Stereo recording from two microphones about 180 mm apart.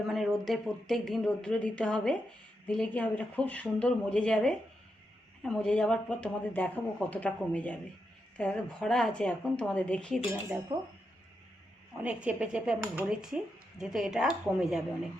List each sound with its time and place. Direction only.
0.1 s speech: centre (ahead or behind)
10.7 s speech: 25° right (ahead or behind)
12.0 s speech: 5° right (ahead or behind)